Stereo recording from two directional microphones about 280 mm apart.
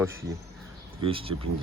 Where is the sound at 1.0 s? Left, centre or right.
Centre.